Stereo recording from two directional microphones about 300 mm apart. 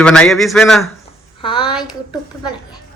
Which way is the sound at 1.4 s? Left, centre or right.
Centre.